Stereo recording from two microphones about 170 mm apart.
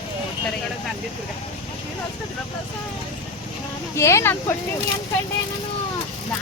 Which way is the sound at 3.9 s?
15° left (ahead or behind).